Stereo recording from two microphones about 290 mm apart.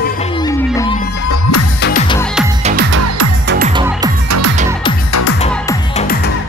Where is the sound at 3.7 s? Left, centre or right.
Centre.